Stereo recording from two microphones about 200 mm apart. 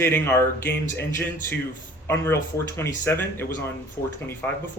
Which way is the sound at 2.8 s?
10° left (ahead or behind).